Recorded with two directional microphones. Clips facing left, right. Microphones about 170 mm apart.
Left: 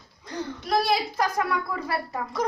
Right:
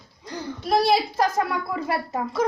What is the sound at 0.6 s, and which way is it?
A woman's voice, 30° right (ahead or behind).